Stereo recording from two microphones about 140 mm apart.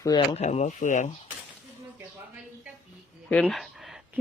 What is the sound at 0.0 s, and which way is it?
Speech, 35° left (ahead or behind).